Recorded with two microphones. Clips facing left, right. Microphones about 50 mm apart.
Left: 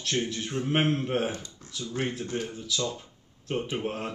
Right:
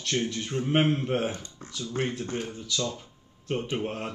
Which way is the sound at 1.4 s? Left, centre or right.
Right.